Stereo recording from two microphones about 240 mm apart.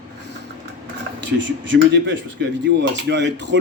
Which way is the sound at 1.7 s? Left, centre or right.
Right.